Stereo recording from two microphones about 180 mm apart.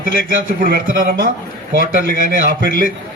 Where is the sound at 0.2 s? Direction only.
55° right (ahead or behind).